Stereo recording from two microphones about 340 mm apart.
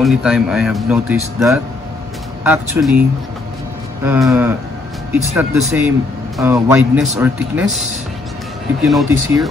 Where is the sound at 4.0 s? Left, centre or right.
Centre.